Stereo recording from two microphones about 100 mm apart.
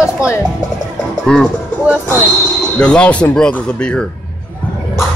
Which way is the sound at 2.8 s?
10° left (ahead or behind).